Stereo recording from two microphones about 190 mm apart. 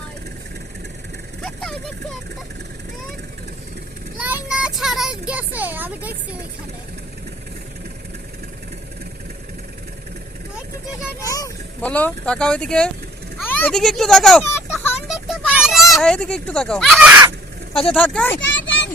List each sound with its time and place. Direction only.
1.4 s vehicle: centre (ahead or behind)
4.2 s child singing: 5° right (ahead or behind)
5.3 s speech: 10° right (ahead or behind)
11.2 s speech: 15° left (ahead or behind)
11.8 s speech: 5° left (ahead or behind)
15.0 s a sound: centre (ahead or behind)
15.9 s speech: 5° left (ahead or behind)
17.9 s speech: 5° left (ahead or behind)
18.3 s vehicle: 75° left (ahead or behind)